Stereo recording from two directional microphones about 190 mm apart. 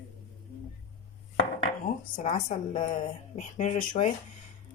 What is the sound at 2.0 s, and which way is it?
Speech, 40° left (ahead or behind).